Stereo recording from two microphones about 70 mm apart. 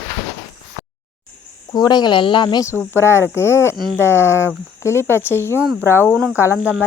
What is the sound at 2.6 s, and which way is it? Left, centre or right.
Speech, left.